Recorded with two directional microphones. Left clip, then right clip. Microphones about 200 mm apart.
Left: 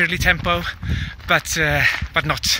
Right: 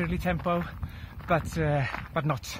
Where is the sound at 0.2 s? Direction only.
35° left (ahead or behind).